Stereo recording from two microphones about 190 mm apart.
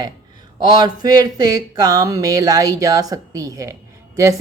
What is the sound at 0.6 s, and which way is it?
Speech, 20° right (ahead or behind).